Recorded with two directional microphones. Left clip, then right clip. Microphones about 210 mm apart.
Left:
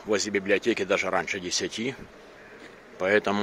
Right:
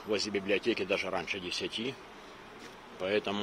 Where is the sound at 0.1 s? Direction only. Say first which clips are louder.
Left 6 dB; 20° left (ahead or behind).